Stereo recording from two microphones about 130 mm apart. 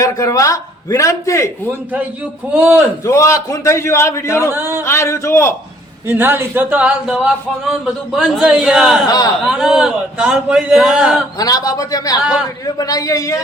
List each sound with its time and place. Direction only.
0.0 s a man's voice: 25° left (ahead or behind)
2.5 s speech: 10° right (ahead or behind)
3.0 s a man's voice: 25° left (ahead or behind)
4.5 s speech: 20° right (ahead or behind)
4.8 s a man's voice: 20° left (ahead or behind)
6.1 s a man's voice: 15° right (ahead or behind)
9.0 s speech: 30° left (ahead or behind)
9.5 s a man's voice: 5° right (ahead or behind)
11.3 s a man's voice: 30° left (ahead or behind)